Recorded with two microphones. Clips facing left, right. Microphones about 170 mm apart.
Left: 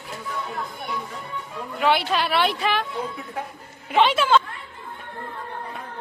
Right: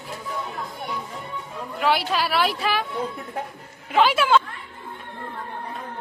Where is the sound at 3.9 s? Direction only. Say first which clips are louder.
Even; 5° right (ahead or behind).